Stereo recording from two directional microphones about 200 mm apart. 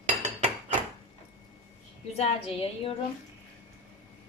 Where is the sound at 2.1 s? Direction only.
30° left (ahead or behind).